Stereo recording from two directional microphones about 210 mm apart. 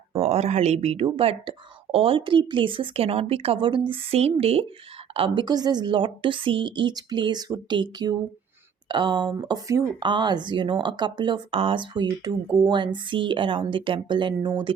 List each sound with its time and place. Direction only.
0.1 s speech: 30° right (ahead or behind)